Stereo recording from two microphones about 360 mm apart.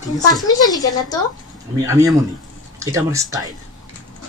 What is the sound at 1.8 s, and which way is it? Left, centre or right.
Speech, centre.